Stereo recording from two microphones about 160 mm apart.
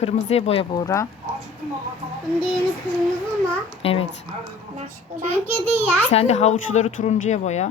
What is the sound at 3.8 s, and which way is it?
Speech, 35° left (ahead or behind).